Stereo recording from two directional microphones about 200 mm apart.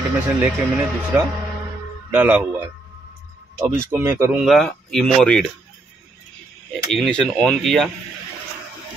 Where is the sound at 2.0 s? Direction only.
10° right (ahead or behind).